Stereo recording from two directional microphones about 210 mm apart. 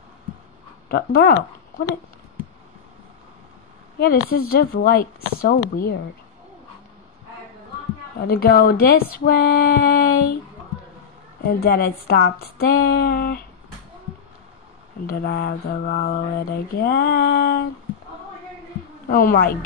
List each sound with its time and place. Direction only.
0.8 s mantra: 50° left (ahead or behind)
4.0 s mantra: 45° left (ahead or behind)
8.2 s mantra: 45° left (ahead or behind)
11.4 s mantra: 45° left (ahead or behind)
15.0 s mantra: 50° left (ahead or behind)
19.0 s mantra: 45° left (ahead or behind)